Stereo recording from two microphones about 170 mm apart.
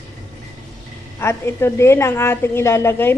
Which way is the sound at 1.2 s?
15° left (ahead or behind).